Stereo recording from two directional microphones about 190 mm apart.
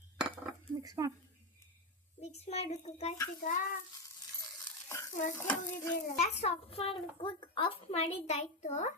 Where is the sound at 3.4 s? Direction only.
40° left (ahead or behind).